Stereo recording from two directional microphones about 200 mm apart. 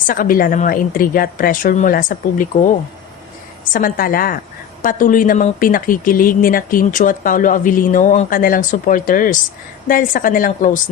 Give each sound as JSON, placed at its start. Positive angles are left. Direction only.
{"t": 0.1, "sound": "a woman's voice", "side_deg": 45}